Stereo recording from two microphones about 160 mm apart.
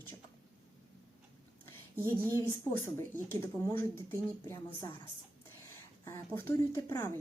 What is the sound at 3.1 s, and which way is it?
Speech, 15° left (ahead or behind).